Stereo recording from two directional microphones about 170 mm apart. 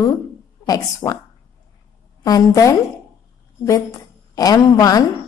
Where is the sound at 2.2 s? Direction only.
20° left (ahead or behind).